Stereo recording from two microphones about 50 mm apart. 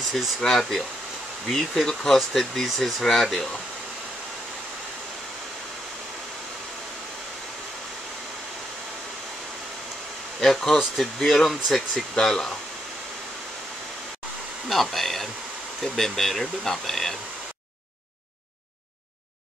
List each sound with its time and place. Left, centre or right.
0.4 s speech: centre
10.4 s speech: centre
14.7 s speech: centre